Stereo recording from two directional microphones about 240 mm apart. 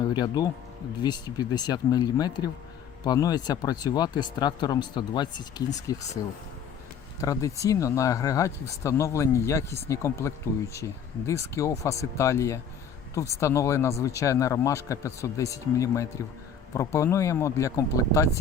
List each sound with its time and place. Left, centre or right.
0.1 s speech: centre
7.2 s speech: centre